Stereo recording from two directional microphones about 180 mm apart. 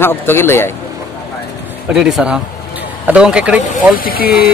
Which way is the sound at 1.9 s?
5° right (ahead or behind).